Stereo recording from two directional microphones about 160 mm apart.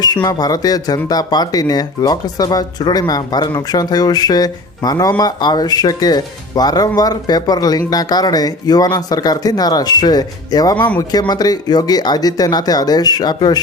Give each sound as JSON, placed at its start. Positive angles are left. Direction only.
{"t": 0.0, "sound": "speech", "side_deg": 25}